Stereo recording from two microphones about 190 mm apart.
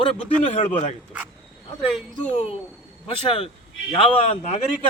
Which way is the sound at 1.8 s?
5° left (ahead or behind).